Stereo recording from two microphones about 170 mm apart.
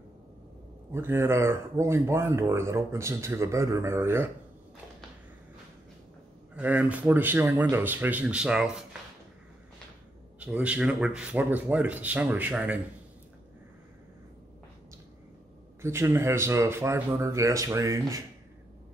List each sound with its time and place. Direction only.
0.9 s speech: 15° right (ahead or behind)
6.5 s speech: 10° right (ahead or behind)
10.4 s speech: 5° right (ahead or behind)
15.8 s speech: 15° right (ahead or behind)